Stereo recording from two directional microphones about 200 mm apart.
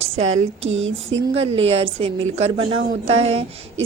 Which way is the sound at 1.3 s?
30° right (ahead or behind).